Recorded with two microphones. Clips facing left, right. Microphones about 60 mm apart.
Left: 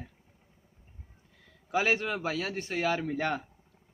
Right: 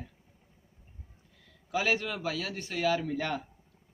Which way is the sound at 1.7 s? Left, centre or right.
Left.